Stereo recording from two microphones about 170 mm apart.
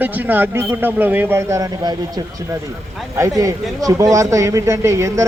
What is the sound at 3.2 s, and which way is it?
Speech, 20° right (ahead or behind).